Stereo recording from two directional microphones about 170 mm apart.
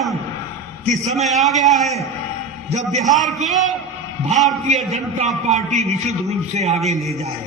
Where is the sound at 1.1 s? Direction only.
Centre (ahead or behind).